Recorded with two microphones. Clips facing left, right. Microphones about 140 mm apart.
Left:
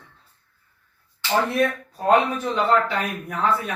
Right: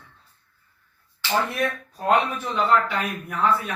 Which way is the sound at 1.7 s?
25° left (ahead or behind).